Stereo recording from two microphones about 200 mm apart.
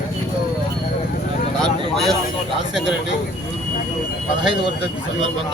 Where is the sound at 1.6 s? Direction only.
Centre (ahead or behind).